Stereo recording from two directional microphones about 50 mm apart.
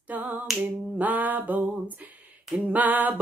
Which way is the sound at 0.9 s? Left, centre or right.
Right.